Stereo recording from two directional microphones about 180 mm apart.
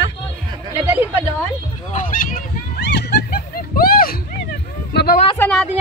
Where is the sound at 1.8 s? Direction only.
45° left (ahead or behind).